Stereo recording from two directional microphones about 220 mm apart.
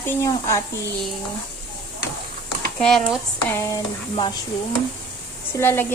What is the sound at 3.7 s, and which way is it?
Speech, 20° left (ahead or behind).